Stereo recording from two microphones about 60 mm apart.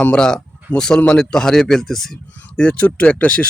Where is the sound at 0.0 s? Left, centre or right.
Centre.